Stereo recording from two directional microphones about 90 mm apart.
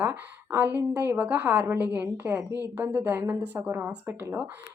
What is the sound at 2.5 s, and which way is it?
Speech, 40° left (ahead or behind).